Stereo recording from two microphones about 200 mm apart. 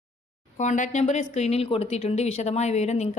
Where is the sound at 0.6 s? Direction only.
35° left (ahead or behind).